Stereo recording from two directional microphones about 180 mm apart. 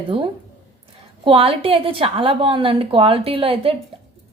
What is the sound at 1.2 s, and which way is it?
A woman's voice, 30° right (ahead or behind).